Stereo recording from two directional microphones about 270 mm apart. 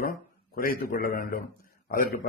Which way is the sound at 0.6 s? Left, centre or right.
Left.